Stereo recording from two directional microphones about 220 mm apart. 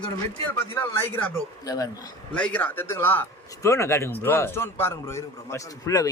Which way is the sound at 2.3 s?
5° left (ahead or behind).